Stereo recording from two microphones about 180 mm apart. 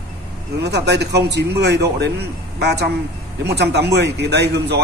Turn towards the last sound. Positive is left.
turn(degrees=-70)  # may be behind; listen again after turning